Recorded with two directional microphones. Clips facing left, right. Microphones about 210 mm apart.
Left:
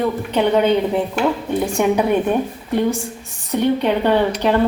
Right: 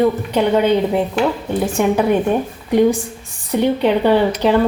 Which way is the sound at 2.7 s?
15° right (ahead or behind).